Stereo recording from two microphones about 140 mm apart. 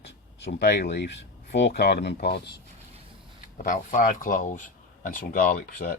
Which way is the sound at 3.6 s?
65° left (ahead or behind).